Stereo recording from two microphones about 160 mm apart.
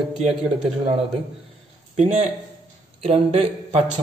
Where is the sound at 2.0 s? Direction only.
45° right (ahead or behind).